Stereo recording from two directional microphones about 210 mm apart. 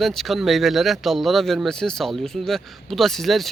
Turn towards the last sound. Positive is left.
turn(degrees=0)  # may be behind; listen again after turning